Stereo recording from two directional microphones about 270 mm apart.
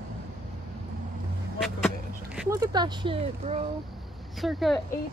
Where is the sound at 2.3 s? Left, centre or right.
Centre.